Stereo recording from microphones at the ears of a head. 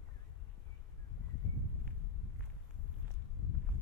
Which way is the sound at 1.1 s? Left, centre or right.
Left.